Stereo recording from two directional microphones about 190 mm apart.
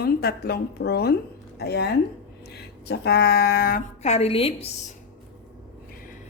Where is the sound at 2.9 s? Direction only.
60° left (ahead or behind).